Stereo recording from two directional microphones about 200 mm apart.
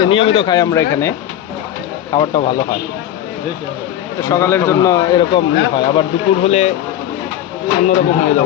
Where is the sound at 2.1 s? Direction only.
20° left (ahead or behind).